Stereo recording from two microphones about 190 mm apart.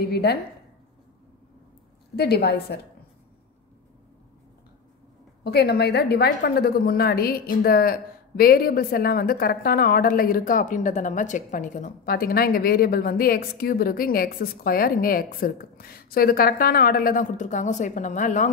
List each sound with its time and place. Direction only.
0.0 s a woman's voice: 55° left (ahead or behind)
2.1 s a woman's voice: 55° left (ahead or behind)
5.4 s a woman's voice: 60° left (ahead or behind); by 18.5 s 40° left (ahead or behind)